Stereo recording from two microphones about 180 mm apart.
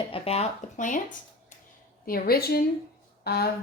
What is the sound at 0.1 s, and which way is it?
Speech, 35° left (ahead or behind).